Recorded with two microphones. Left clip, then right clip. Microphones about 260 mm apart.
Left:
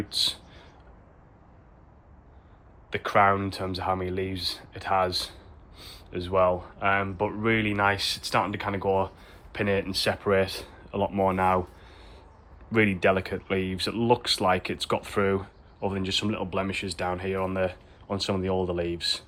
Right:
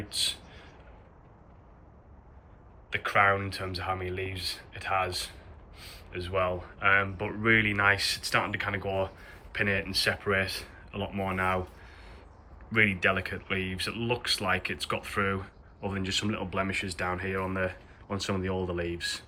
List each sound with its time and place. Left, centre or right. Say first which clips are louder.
0.1 s speech: left 3 dB; centre
2.9 s speech: left 3 dB; centre